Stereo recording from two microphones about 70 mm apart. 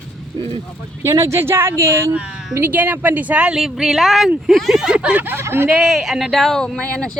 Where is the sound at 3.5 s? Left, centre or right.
Centre.